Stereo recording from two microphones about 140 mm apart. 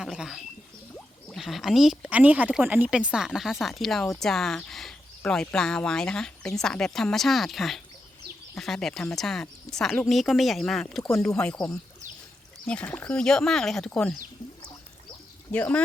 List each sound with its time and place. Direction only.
0.0 s speech: 5° right (ahead or behind)
1.4 s speech: centre (ahead or behind)
11.0 s speech: 20° left (ahead or behind)
12.6 s speech: 10° left (ahead or behind)
15.5 s speech: 10° left (ahead or behind)